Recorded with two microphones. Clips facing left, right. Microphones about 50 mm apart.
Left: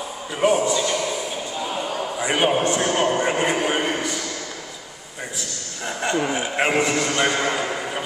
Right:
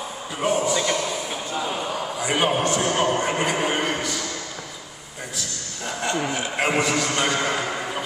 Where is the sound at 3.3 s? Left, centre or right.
Centre.